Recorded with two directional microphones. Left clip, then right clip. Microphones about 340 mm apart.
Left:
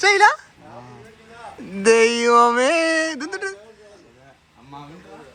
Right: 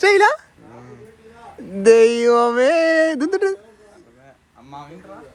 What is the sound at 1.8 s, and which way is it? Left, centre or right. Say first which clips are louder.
Speech: right 3 dB; centre.